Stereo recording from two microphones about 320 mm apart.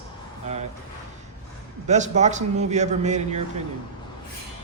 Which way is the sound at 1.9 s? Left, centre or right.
Right.